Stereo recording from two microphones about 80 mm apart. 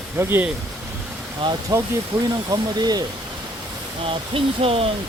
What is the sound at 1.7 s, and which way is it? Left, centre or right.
Speech, right.